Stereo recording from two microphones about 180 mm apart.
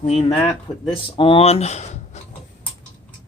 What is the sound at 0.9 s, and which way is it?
Speech, 30° left (ahead or behind).